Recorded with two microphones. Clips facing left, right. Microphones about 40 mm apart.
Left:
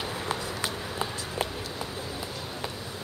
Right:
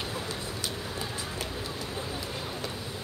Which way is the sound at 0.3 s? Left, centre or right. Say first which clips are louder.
Left 4 dB; left.